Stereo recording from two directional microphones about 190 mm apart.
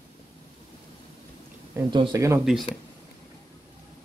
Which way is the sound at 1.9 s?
20° right (ahead or behind).